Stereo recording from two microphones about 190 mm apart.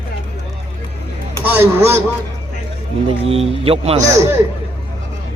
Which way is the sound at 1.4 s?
10° right (ahead or behind).